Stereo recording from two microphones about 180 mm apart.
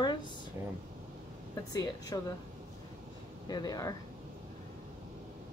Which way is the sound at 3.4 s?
25° left (ahead or behind).